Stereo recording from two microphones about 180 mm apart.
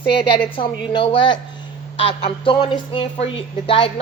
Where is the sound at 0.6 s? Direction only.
25° left (ahead or behind).